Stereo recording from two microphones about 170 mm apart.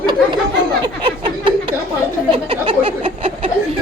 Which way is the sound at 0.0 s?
25° right (ahead or behind).